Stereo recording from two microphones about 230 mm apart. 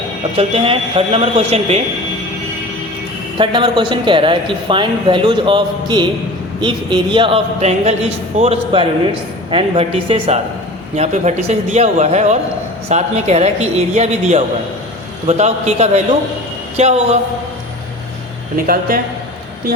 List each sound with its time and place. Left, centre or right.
0.3 s speech: right
3.3 s speech: right
18.5 s speech: right